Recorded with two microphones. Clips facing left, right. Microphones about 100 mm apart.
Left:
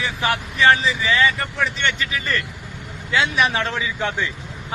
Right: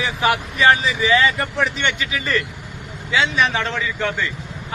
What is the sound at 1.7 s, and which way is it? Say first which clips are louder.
Speech: right 1 dB; 5° right (ahead or behind).